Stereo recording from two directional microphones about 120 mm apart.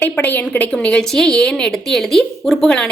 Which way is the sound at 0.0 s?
15° left (ahead or behind).